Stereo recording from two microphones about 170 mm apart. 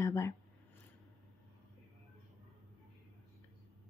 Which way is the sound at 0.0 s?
15° left (ahead or behind).